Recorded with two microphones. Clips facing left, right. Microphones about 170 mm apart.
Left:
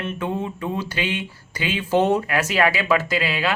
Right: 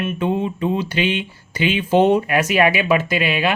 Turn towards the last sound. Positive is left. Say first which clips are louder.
# right 3 dB
turn(degrees=-20)  # may be behind; listen again after turning